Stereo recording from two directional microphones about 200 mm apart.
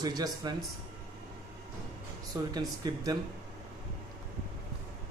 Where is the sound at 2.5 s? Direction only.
20° right (ahead or behind).